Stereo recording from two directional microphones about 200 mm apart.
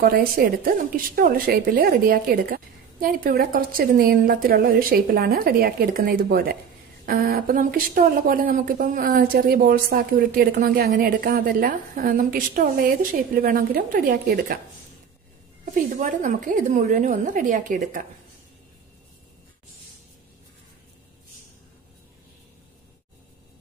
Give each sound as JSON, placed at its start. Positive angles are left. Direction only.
{"t": 0.0, "sound": "speech", "side_deg": -45}
{"t": 15.7, "sound": "a woman's voice", "side_deg": -40}